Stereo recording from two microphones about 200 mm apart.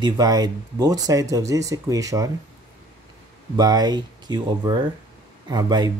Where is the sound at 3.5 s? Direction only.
20° right (ahead or behind).